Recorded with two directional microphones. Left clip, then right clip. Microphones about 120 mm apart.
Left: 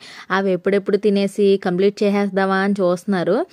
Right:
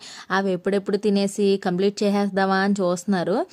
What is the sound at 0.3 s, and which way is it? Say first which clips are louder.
Speech: left 4 dB; 20° left (ahead or behind).